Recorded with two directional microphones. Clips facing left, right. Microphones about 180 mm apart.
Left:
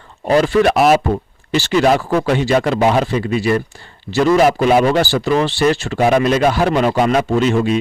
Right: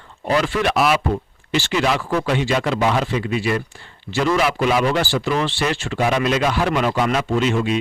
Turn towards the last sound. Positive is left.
turn(degrees=40)  # may be behind; listen again after turning